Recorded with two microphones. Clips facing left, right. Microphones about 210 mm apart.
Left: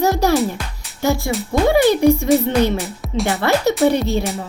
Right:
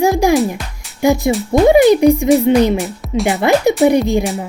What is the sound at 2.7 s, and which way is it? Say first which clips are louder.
Speech: right 4 dB; centre (ahead or behind).